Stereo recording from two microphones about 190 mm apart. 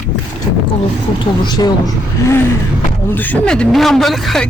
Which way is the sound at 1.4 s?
20° left (ahead or behind).